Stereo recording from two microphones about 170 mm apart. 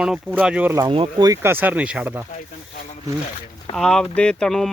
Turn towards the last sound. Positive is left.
turn(degrees=5)  # may be behind; listen again after turning